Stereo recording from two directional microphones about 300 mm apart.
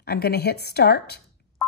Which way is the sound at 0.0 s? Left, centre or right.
Left.